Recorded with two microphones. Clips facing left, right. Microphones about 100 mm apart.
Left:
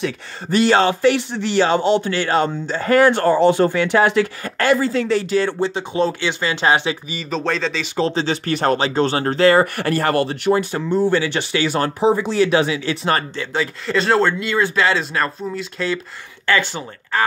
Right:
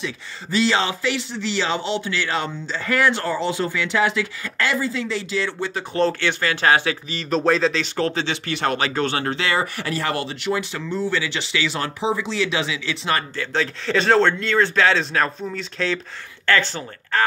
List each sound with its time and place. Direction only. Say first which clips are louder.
0.0 s speech: left 6 dB; 55° left (ahead or behind)
4.7 s speech: left 6 dB; 65° left (ahead or behind)
5.9 s speech: even; 15° left (ahead or behind)
7.2 s speech: right 6 dB; centre (ahead or behind)
8.0 s speech: left 5 dB; 30° left (ahead or behind)
8.7 s speech: left 4 dB; 30° left (ahead or behind); by 13.2 s 45° left (ahead or behind)
13.4 s speech: left 1 dB; 10° left (ahead or behind)
16.4 s speech: left 1 dB; 15° left (ahead or behind)